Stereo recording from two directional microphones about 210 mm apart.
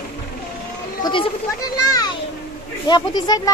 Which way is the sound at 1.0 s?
25° left (ahead or behind).